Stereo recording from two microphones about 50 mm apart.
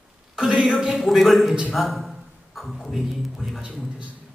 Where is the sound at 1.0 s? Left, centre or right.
Centre.